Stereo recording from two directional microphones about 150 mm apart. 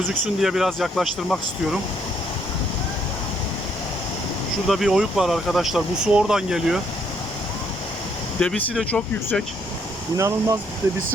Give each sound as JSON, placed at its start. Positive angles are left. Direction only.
{"t": 0.1, "sound": "speech", "side_deg": -5}
{"t": 4.7, "sound": "speech", "side_deg": 0}
{"t": 8.4, "sound": "speech", "side_deg": 5}
{"t": 10.2, "sound": "speech", "side_deg": -20}